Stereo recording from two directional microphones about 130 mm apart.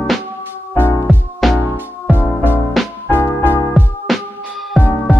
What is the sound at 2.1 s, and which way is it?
Music, 15° left (ahead or behind).